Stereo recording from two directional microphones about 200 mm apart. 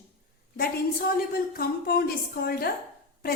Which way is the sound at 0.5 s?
50° left (ahead or behind).